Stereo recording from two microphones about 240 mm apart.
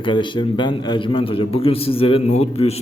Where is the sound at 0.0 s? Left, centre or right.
Centre.